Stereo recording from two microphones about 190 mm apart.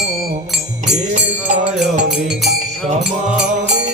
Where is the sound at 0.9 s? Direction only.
40° right (ahead or behind).